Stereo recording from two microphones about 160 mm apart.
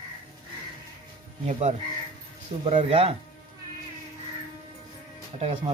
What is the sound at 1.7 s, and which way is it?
Speech, 45° right (ahead or behind).